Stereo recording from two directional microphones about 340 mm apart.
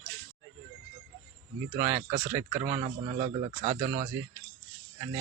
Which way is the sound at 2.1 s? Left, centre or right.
Centre.